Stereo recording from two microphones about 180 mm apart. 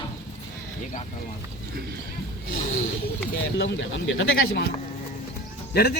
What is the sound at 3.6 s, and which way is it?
Speech, 85° left.